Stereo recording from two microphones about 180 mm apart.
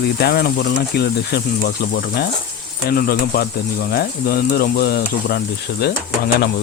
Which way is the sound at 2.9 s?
55° left (ahead or behind).